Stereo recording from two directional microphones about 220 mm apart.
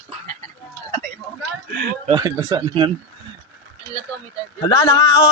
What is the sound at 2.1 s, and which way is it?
Speech, 15° right (ahead or behind).